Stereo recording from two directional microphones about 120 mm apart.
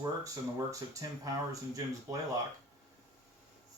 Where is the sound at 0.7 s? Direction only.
30° right (ahead or behind).